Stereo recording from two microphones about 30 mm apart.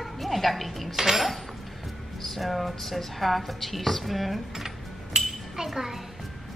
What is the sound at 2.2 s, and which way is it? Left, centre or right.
A child's voice, centre.